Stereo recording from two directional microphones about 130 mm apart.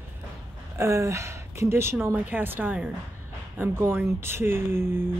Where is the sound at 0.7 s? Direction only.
25° right (ahead or behind).